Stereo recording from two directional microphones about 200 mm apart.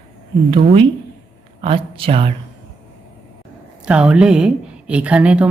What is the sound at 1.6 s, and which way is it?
Speech, 25° right (ahead or behind).